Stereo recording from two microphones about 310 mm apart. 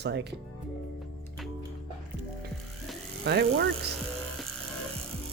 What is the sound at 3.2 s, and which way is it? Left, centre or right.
Speech, right.